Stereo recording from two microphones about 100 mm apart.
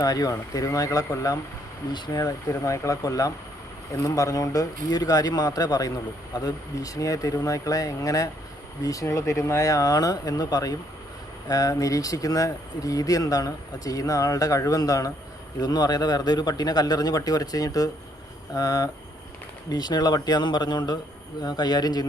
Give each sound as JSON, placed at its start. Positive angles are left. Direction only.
{"t": 0.0, "sound": "speech", "side_deg": 35}
{"t": 1.9, "sound": "speech", "side_deg": 50}
{"t": 2.2, "sound": "speech", "side_deg": 35}